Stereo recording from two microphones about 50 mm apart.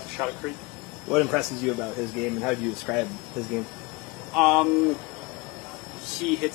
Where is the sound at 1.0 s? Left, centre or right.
Centre.